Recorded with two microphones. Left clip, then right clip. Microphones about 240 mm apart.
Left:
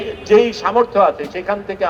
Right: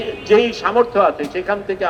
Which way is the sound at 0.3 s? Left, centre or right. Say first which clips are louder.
Left 2 dB; left.